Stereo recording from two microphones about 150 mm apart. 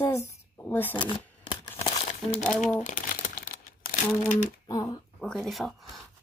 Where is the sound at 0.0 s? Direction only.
20° left (ahead or behind).